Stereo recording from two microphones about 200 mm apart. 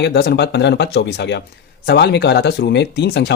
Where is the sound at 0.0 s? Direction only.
55° left (ahead or behind).